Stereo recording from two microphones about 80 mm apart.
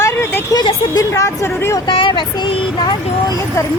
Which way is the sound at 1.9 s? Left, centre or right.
Left.